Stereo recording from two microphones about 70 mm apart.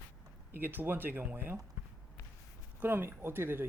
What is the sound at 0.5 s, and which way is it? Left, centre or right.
Speech, right.